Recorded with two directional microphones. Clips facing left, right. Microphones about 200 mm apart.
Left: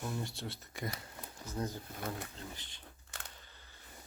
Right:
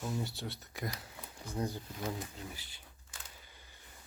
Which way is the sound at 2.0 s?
55° left (ahead or behind).